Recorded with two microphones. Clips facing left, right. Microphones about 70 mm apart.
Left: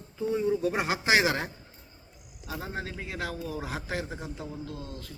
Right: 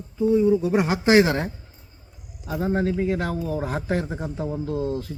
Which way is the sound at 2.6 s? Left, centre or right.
Right.